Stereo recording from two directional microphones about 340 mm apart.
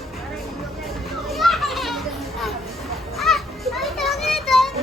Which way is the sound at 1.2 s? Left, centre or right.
Centre.